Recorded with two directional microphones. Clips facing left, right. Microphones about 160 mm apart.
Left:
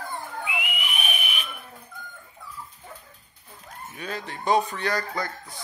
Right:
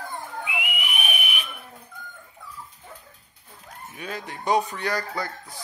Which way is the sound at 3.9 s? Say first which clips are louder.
Even; 10° right (ahead or behind).